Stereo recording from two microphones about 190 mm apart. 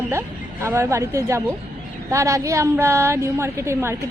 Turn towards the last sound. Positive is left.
turn(degrees=-15)  # may be behind; listen again after turning